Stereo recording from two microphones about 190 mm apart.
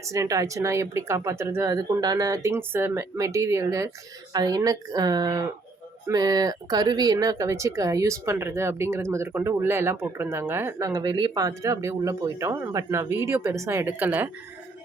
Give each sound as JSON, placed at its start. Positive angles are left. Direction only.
{"t": 0.0, "sound": "speech", "side_deg": -15}